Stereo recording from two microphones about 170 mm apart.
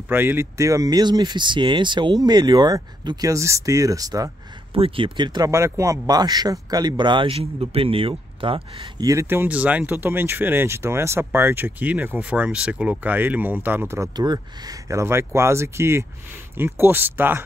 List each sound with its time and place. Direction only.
0.1 s speech: 10° right (ahead or behind)
4.7 s speech: 35° right (ahead or behind)
9.0 s speech: 15° right (ahead or behind)